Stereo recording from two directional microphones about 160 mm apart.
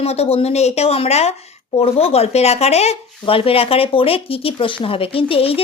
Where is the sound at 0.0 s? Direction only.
40° left (ahead or behind).